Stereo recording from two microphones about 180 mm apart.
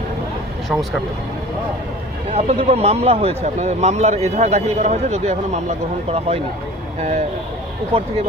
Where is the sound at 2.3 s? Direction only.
35° right (ahead or behind).